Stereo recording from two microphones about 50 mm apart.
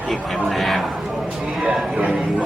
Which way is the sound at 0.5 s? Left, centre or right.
Centre.